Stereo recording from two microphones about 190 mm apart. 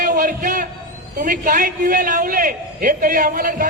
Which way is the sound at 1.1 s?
45° right (ahead or behind).